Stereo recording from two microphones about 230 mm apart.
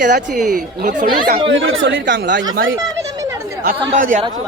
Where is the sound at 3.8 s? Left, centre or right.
Right.